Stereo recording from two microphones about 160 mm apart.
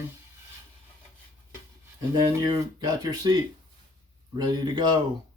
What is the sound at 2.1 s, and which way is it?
Speech, 25° right (ahead or behind).